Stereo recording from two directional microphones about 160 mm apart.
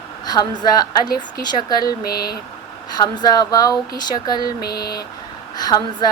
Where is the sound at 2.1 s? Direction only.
75° left (ahead or behind).